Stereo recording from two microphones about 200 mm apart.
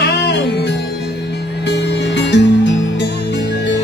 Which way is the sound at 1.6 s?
60° left (ahead or behind).